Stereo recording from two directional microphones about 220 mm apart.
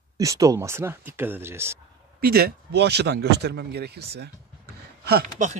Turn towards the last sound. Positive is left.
turn(degrees=-35)  # may be behind; listen again after turning